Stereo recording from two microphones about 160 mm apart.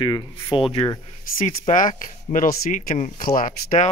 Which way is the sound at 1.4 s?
55° left (ahead or behind).